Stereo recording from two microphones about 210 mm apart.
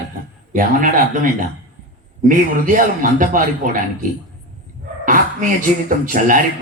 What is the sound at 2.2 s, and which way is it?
A woman's voice, 40° right (ahead or behind).